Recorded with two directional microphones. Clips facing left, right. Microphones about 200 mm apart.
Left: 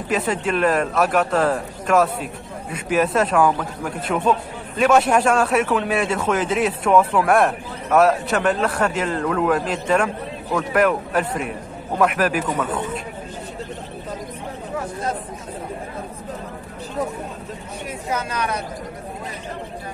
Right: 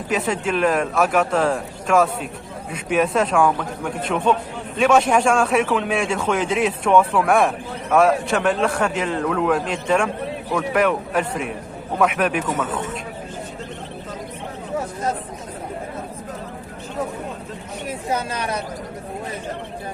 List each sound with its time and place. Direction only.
0.1 s speech: centre (ahead or behind)
18.1 s speech: 30° right (ahead or behind)